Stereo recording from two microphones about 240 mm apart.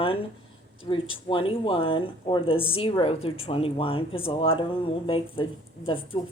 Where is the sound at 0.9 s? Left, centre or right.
Left.